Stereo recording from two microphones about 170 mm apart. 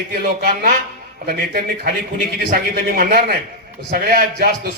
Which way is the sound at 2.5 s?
60° right (ahead or behind).